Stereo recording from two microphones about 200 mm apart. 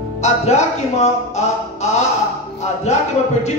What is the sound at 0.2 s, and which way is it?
Speech, 35° left (ahead or behind).